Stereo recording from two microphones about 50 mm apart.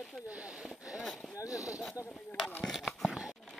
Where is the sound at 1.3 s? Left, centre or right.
Left.